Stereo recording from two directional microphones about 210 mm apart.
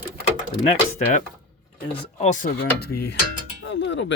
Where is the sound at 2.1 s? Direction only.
35° left (ahead or behind).